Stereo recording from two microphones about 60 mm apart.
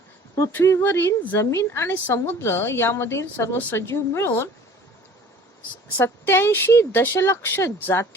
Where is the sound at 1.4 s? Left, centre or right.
Left.